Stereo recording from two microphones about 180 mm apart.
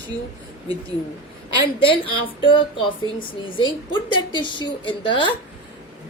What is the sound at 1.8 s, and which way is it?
A woman's voice, 30° left (ahead or behind).